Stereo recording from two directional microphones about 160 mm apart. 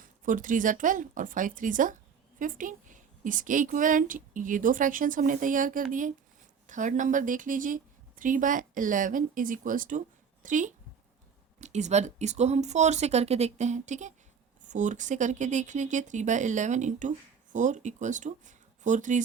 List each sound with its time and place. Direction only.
0.0 s a woman's voice: 55° right (ahead or behind)